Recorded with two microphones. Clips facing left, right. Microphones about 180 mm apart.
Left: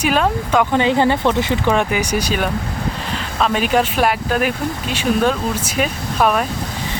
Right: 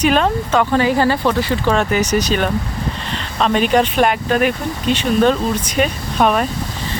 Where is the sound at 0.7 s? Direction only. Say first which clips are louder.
Even; 20° left (ahead or behind); by 6.4 s centre (ahead or behind).